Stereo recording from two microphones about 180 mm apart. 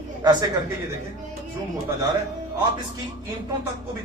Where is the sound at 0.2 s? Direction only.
20° right (ahead or behind).